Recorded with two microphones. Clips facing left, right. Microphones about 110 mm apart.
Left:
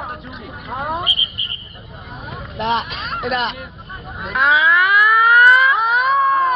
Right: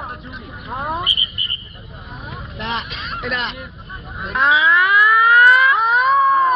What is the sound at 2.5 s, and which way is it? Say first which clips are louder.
Speech: left 7 dB; 50° left (ahead or behind).